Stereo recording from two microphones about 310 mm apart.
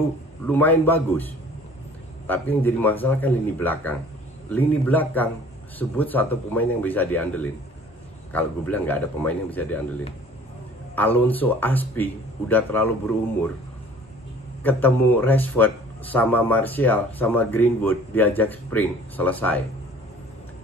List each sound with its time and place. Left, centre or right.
0.5 s a man's voice: centre
11.0 s a man's voice: centre
14.6 s a man's voice: centre